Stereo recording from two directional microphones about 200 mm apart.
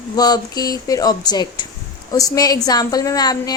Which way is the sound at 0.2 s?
20° left (ahead or behind).